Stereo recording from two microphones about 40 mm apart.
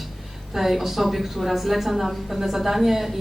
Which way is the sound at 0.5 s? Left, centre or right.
Centre.